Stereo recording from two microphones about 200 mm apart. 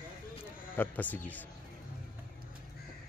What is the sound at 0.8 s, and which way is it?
Speech, 10° left (ahead or behind).